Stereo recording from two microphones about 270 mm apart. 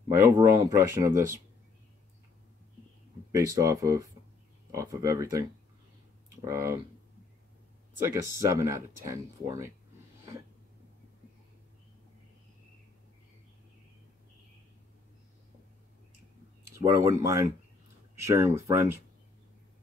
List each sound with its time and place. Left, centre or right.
0.2 s speech: centre
3.3 s speech: centre
8.2 s speech: centre
16.6 s speech: centre